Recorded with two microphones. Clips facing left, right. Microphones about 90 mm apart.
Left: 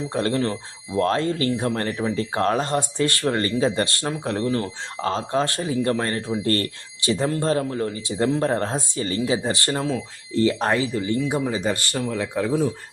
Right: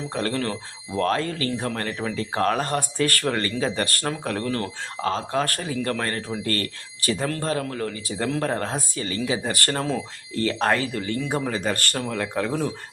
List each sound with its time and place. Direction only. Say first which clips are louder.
0.1 s speech: left 3 dB; 25° left (ahead or behind)
5.0 s speech: left 2 dB; 30° left (ahead or behind); by 12.5 s 10° left (ahead or behind)